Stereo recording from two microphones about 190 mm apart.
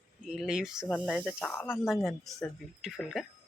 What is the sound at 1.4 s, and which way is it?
Speech, 10° left (ahead or behind).